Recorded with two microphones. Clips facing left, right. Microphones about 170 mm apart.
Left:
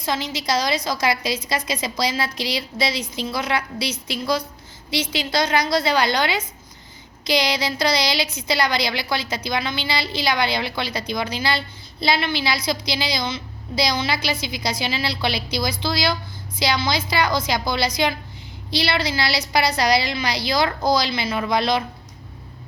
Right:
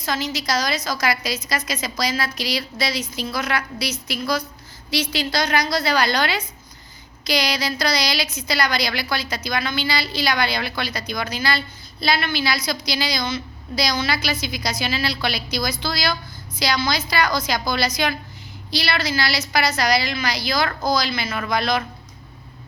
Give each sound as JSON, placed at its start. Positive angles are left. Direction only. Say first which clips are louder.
{"t": 0.0, "sound": "a woman's voice", "louder": "even", "side_deg": 25}